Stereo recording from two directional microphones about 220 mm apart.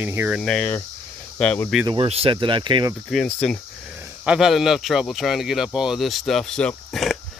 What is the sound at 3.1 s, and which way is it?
Speech, centre (ahead or behind).